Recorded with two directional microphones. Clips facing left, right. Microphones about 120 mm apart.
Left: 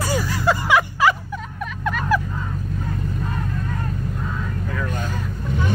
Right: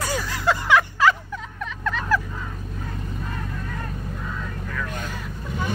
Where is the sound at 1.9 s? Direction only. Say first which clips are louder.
Left 2 dB; 15° left (ahead or behind).